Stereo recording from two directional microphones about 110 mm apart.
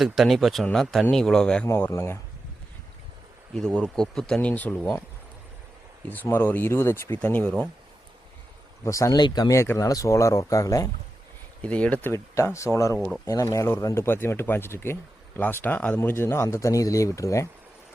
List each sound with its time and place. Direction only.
0.0 s speech: centre (ahead or behind)
1.9 s speech: 25° left (ahead or behind)
3.5 s speech: 5° left (ahead or behind)
6.2 s speech: 20° left (ahead or behind)
8.8 s speech: 30° left (ahead or behind)
11.6 s speech: 10° left (ahead or behind)
12.1 s speech: 25° left (ahead or behind)